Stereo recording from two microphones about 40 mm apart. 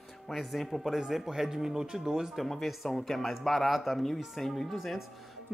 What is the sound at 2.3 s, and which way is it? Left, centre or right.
Speech, centre.